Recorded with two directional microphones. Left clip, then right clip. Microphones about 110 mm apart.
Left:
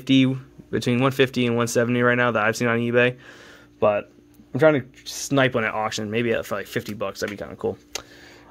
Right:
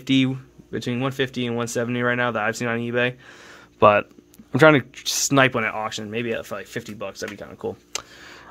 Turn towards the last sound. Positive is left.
turn(degrees=25)  # may be behind; listen again after turning